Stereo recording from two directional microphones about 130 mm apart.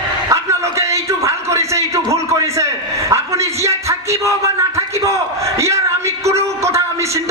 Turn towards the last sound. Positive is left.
turn(degrees=-20)  # may be behind; listen again after turning